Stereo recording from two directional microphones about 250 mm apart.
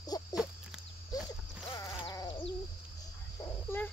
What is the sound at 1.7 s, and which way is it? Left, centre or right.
Sheep, centre.